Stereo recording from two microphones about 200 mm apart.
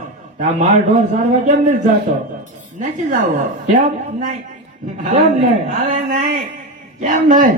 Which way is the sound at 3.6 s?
40° right (ahead or behind).